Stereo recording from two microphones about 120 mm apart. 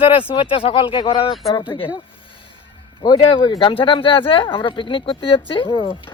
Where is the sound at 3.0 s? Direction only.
35° left (ahead or behind).